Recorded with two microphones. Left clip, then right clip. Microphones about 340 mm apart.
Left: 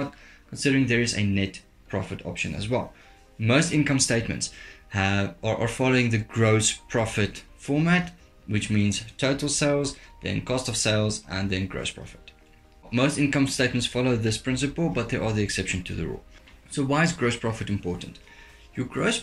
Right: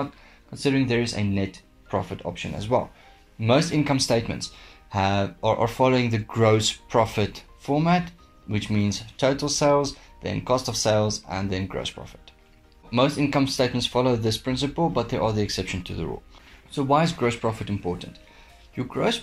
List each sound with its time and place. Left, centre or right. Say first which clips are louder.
0.5 s speech: even; centre